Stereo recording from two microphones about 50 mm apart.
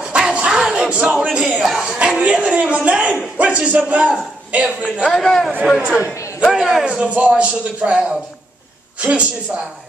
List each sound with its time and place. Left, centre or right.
0.1 s a sound: right
0.5 s a sound: centre
0.7 s speech: right
1.6 s speech: centre
2.0 s a man's voice: right
5.0 s a man's voice: centre
6.4 s a man's voice: centre
6.8 s a man's voice: centre